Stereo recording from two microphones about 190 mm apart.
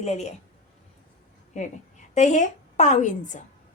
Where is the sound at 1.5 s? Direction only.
40° left (ahead or behind).